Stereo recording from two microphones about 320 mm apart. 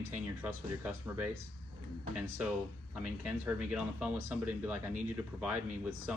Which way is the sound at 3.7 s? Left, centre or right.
Centre.